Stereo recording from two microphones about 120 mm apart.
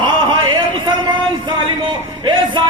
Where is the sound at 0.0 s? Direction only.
40° right (ahead or behind).